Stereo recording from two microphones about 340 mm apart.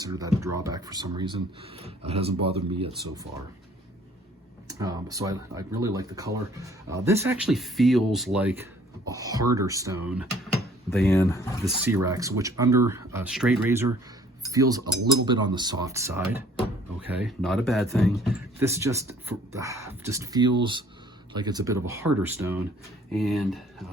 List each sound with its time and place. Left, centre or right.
0.0 s speech: centre
4.7 s speech: centre
10.9 s speech: centre
11.6 s speech: centre